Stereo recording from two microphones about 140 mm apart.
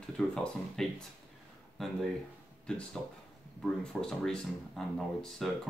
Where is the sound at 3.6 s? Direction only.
5° left (ahead or behind).